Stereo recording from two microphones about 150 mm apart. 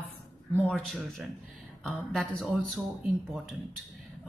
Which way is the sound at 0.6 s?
Centre (ahead or behind).